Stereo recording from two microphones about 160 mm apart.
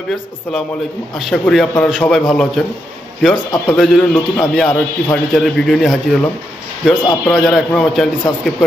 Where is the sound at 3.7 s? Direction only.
Centre (ahead or behind).